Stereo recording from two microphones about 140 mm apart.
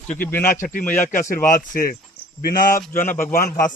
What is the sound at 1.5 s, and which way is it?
Speech, 90° left.